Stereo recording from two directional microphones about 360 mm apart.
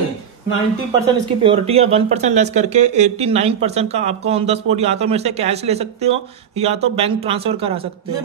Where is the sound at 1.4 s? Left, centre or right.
Centre.